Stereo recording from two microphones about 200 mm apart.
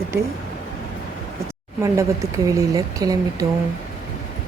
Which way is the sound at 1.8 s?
15° right (ahead or behind).